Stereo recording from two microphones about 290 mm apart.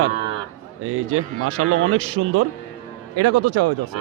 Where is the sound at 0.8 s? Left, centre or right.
Right.